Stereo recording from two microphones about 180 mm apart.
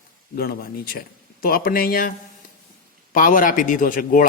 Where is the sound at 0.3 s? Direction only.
55° left (ahead or behind).